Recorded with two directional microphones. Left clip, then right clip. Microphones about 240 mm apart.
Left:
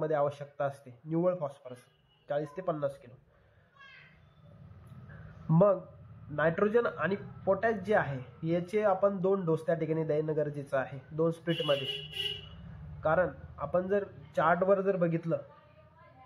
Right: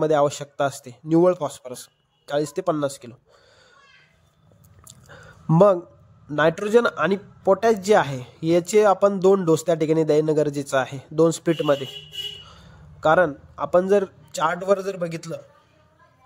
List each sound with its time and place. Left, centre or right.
0.0 s speech: right
5.5 s speech: right
13.0 s speech: right